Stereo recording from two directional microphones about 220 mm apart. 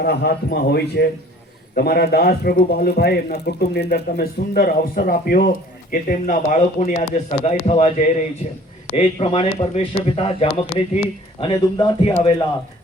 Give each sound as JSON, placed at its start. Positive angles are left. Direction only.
{"t": 0.0, "sound": "a man's voice", "side_deg": 50}
{"t": 9.0, "sound": "speech", "side_deg": 25}